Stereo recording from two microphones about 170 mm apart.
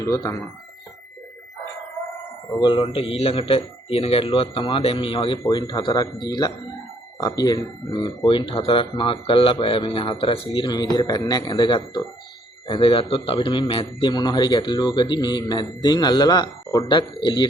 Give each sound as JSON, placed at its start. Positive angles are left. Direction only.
{"t": 0.0, "sound": "speech", "side_deg": 20}
{"t": 2.6, "sound": "a man's voice", "side_deg": 30}